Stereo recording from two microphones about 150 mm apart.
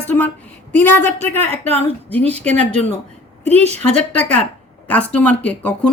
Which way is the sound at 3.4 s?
45° right (ahead or behind).